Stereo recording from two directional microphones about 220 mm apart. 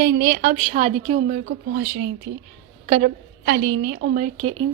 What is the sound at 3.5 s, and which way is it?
Speech, 50° right (ahead or behind).